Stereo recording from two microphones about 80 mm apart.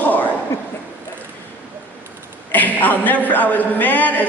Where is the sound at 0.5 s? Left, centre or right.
Left.